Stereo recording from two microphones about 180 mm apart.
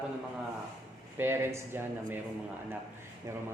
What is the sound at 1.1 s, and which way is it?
Speech, 15° right (ahead or behind).